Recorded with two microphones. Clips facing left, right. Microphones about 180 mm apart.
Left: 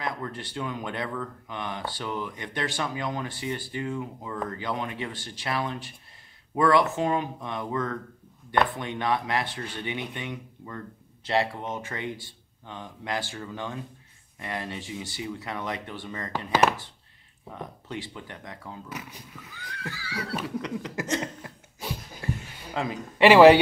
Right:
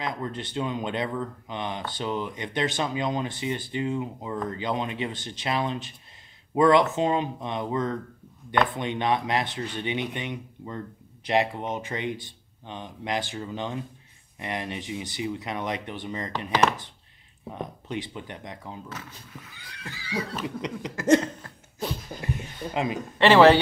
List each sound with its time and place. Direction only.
0.0 s speech: 20° right (ahead or behind)
17.6 s speech: 20° right (ahead or behind)
18.9 s a man's voice: 15° left (ahead or behind)
19.5 s speech: 20° right (ahead or behind)
21.4 s a sound: 10° left (ahead or behind)
23.1 s a man's voice: 10° left (ahead or behind)